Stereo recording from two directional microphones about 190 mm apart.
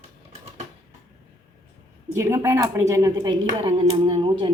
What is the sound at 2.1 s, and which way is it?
Speech, 15° right (ahead or behind).